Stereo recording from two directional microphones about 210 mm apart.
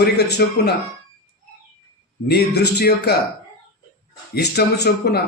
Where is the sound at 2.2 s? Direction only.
50° left (ahead or behind).